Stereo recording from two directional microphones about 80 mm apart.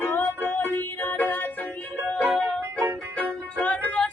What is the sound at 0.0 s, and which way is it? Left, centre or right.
Music, left.